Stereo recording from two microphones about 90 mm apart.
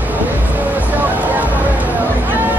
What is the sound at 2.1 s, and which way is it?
Hubbub, 20° right (ahead or behind).